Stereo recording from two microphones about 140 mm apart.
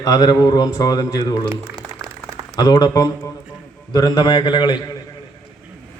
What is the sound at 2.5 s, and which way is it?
A man's voice, 30° left (ahead or behind).